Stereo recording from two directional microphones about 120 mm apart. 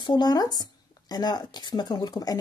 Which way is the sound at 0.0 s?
35° left (ahead or behind).